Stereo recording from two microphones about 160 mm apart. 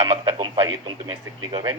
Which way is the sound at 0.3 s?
30° right (ahead or behind).